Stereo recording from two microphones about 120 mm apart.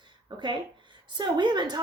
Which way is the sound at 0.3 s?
40° right (ahead or behind).